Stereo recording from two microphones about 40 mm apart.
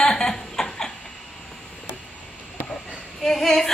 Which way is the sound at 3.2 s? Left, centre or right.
Centre.